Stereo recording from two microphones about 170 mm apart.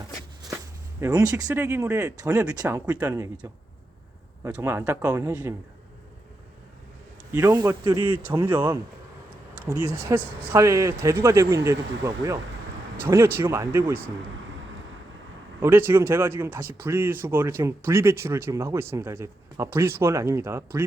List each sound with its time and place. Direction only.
1.0 s speech: 20° right (ahead or behind)
4.4 s speech: 15° right (ahead or behind)
7.3 s a man's voice: 20° right (ahead or behind)
8.3 s speech: 10° right (ahead or behind)
15.6 s speech: 15° right (ahead or behind)